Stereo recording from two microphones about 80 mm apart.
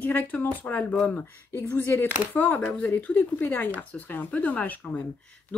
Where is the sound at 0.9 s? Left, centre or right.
Centre.